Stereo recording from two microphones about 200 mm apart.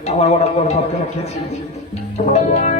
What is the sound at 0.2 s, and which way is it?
Speech, 30° left (ahead or behind).